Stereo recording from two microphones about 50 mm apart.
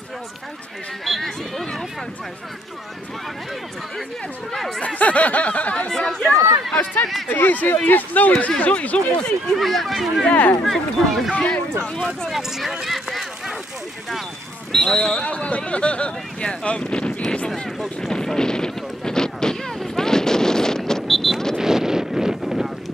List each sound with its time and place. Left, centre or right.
1.0 s speech: centre
4.5 s speech: centre
4.8 s a sound: left
5.9 s speech: centre
6.8 s speech: left
9.5 s speech: centre
11.3 s speech: left
12.3 s speech: centre
12.8 s run: centre
14.7 s speech: centre
18.0 s a sound: centre
21.5 s a sound: centre